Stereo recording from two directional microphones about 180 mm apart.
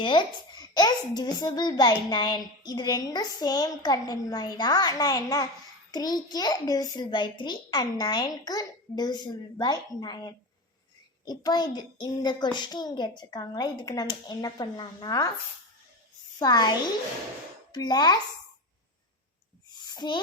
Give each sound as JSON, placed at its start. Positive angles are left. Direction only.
{"t": 0.0, "sound": "a child's voice", "side_deg": 25}
{"t": 16.4, "sound": "a child's voice", "side_deg": 20}
{"t": 19.7, "sound": "a sound", "side_deg": 25}